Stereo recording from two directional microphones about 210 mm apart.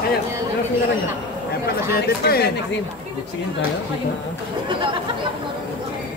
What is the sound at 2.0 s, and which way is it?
Speech, 50° left (ahead or behind).